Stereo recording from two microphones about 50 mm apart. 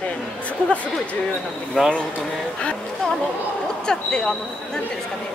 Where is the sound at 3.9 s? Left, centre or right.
Centre.